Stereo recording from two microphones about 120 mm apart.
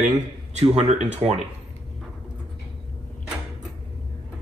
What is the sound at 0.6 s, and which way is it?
Speech, 65° right (ahead or behind).